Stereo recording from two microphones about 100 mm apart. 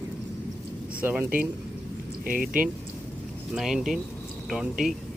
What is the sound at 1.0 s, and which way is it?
Speech, 20° right (ahead or behind).